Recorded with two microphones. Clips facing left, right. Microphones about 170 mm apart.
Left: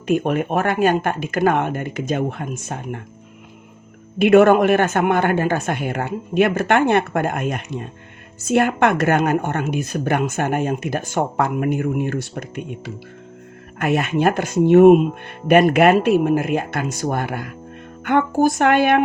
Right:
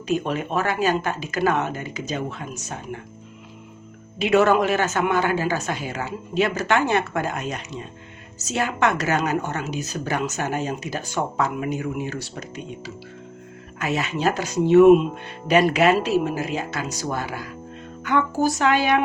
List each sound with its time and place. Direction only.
0.1 s speech: 55° left (ahead or behind)
4.2 s speech: 55° left (ahead or behind)